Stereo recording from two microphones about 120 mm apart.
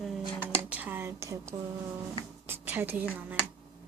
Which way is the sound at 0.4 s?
10° right (ahead or behind).